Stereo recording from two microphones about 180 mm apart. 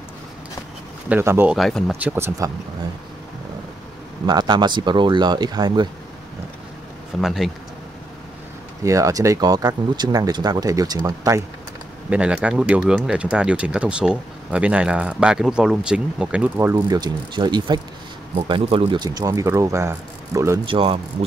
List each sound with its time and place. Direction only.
1.0 s speech: 10° right (ahead or behind)
1.6 s speech: centre (ahead or behind)
2.0 s speech: 10° right (ahead or behind)
4.3 s speech: 25° right (ahead or behind)
7.2 s speech: centre (ahead or behind)
8.8 s speech: 15° right (ahead or behind)
12.1 s speech: 5° right (ahead or behind); by 17.7 s 25° right (ahead or behind)
18.3 s speech: 35° right (ahead or behind)